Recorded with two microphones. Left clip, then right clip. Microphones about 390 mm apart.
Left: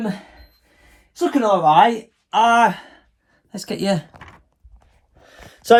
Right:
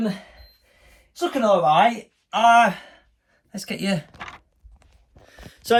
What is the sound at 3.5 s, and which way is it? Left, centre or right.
Speech, centre.